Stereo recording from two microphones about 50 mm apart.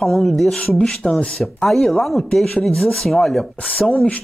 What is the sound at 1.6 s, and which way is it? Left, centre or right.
Speech, centre.